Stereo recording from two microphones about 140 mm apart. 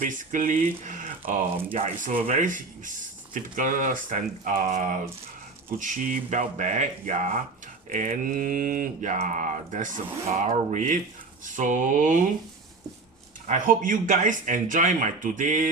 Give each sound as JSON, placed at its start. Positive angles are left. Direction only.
{"t": 0.1, "sound": "speech", "side_deg": -65}
{"t": 2.0, "sound": "speech", "side_deg": -75}
{"t": 13.5, "sound": "speech", "side_deg": -70}